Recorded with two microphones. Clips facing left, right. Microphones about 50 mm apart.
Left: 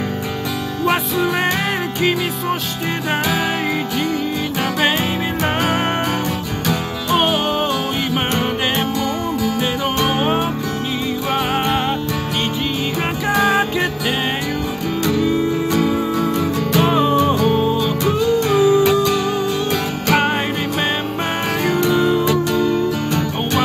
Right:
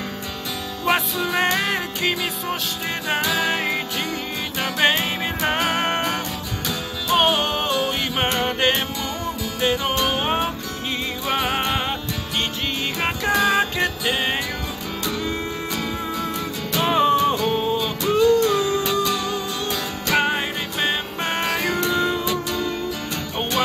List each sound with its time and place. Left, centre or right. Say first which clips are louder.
2.0 s music: left 5 dB; centre
5.4 s music: left 2 dB; centre
7.1 s music: left 2 dB; centre
13.3 s music: left 3 dB; centre
15.7 s music: left 9 dB; centre
16.9 s music: left 2 dB; centre
18.0 s music: right 2 dB; left
21.5 s music: left 7 dB; centre
22.2 s music: left 7 dB; left